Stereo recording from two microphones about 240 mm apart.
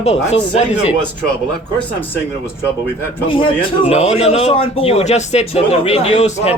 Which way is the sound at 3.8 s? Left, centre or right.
Left.